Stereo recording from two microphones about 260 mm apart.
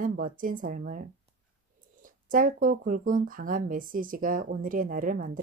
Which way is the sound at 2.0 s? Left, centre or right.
Right.